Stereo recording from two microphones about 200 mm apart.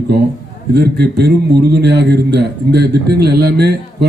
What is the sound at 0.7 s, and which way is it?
A man's voice, 55° right (ahead or behind).